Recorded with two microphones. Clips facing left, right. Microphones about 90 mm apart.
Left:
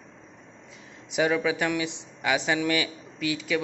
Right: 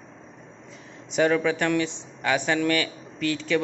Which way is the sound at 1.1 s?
10° left (ahead or behind).